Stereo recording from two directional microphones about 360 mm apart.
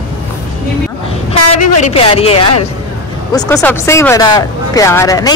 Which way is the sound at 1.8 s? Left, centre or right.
Centre.